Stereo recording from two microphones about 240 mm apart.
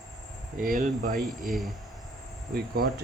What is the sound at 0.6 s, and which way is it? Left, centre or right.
Speech, right.